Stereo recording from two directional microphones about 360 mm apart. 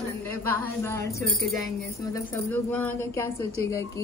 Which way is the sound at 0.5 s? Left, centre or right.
Centre.